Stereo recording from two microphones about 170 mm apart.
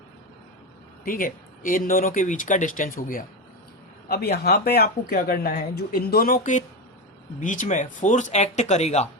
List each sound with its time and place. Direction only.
1.0 s speech: 55° left (ahead or behind)
4.1 s speech: 65° left (ahead or behind); by 9.0 s 40° left (ahead or behind)